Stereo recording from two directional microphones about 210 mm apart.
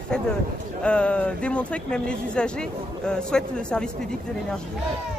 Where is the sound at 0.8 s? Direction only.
5° left (ahead or behind).